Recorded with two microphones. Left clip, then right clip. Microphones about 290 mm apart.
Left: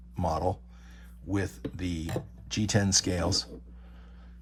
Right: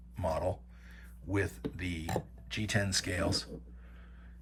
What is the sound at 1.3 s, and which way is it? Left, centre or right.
Speech, centre.